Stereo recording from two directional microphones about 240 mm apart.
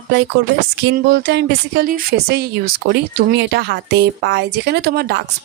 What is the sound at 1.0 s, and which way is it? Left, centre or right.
Speech, right.